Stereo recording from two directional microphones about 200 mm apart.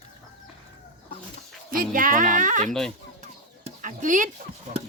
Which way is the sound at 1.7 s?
45° right (ahead or behind).